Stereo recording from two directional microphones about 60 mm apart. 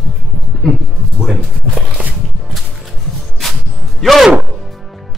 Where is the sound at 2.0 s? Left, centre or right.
Right.